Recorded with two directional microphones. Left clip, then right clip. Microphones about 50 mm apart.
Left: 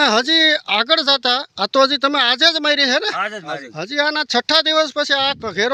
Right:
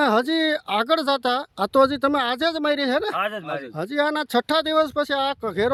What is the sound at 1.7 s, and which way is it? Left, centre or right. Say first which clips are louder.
Speech: left 4 dB; right.